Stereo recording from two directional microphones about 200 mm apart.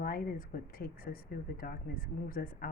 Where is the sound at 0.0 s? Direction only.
45° left (ahead or behind).